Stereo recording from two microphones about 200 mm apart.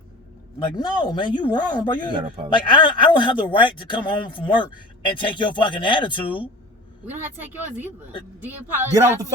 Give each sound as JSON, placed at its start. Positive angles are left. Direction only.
{"t": 0.8, "sound": "speech", "side_deg": 20}
{"t": 8.4, "sound": "speech", "side_deg": -10}